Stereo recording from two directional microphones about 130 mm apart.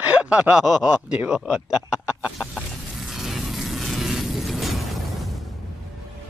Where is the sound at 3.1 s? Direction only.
Centre (ahead or behind).